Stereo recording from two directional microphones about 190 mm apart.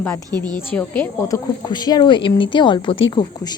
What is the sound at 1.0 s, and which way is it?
Speech, 15° left (ahead or behind).